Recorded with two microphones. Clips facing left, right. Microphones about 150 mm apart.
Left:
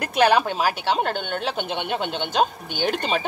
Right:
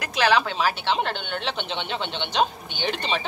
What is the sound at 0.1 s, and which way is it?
Speech, 50° left (ahead or behind).